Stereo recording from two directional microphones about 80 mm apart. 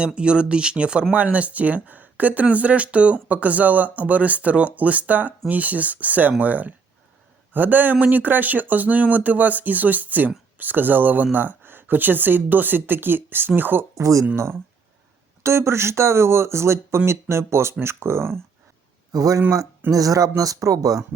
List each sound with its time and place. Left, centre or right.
0.0 s speech: centre
13.9 s speech: right
14.3 s speech: right
19.1 s speech: right